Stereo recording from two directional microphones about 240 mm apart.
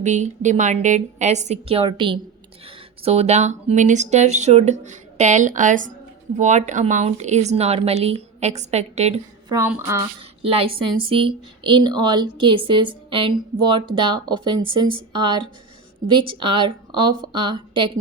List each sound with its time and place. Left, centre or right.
0.0 s a woman's voice: right
9.5 s speech: centre
10.4 s a woman's voice: right